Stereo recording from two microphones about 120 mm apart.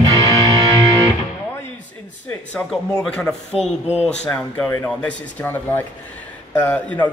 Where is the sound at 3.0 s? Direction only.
5° left (ahead or behind).